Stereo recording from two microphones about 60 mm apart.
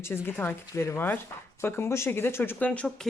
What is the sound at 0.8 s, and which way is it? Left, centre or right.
Speech, left.